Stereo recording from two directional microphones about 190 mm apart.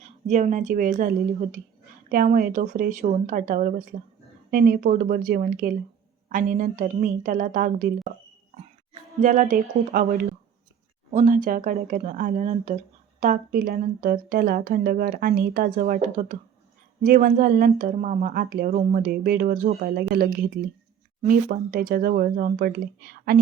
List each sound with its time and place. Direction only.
0.0 s a woman's voice: 35° right (ahead or behind); by 23.4 s 55° right (ahead or behind)